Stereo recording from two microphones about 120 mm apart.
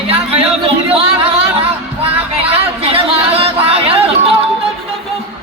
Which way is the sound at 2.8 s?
55° right (ahead or behind).